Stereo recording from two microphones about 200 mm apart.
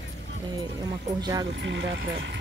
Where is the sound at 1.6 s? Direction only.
65° right (ahead or behind).